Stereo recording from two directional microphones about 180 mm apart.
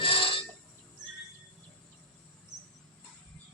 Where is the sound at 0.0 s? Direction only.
30° left (ahead or behind).